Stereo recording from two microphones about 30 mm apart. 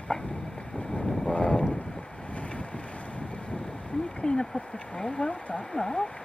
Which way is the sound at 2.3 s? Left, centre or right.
Left.